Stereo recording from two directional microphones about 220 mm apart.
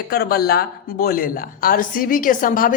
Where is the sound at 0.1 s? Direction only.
45° left (ahead or behind).